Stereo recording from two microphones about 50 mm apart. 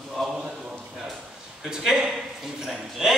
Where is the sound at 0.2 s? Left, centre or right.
Centre.